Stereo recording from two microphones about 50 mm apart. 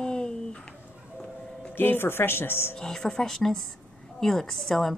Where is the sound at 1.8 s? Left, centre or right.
Left.